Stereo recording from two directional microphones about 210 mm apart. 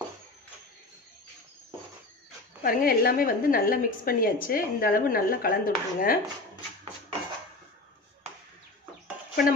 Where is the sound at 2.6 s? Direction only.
45° left (ahead or behind).